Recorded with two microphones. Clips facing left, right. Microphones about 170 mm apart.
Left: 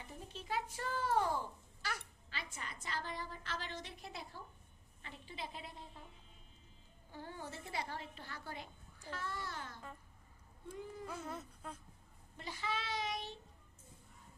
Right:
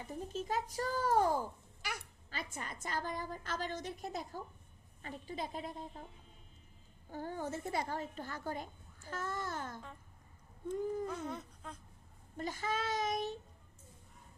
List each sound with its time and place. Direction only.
0.1 s a woman's voice: 45° right (ahead or behind)
1.8 s a sound: 15° right (ahead or behind)
2.3 s a woman's voice: 45° right (ahead or behind)
7.1 s a woman's voice: 45° right (ahead or behind)
11.0 s speech: 5° left (ahead or behind)
12.4 s a woman's voice: 45° right (ahead or behind)